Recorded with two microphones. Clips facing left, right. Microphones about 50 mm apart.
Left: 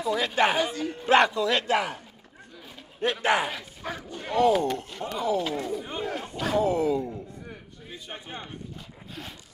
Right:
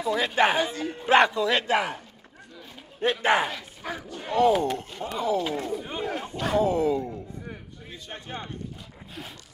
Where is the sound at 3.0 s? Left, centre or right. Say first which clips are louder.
Right 2 dB; right.